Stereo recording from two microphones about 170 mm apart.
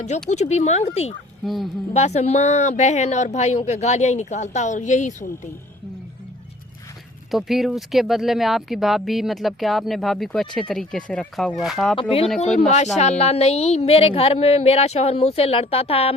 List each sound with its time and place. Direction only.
0.3 s a woman's voice: 40° left (ahead or behind)
7.3 s speech: centre (ahead or behind)
11.9 s a woman's voice: 30° left (ahead or behind)
12.5 s a woman's voice: 40° left (ahead or behind)